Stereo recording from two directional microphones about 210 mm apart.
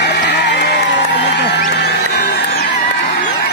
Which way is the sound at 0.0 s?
55° left (ahead or behind).